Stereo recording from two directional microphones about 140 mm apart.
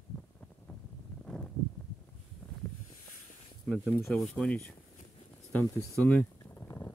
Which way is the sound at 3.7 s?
Centre (ahead or behind).